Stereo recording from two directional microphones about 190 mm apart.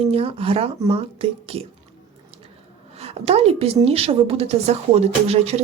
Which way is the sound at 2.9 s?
35° right (ahead or behind).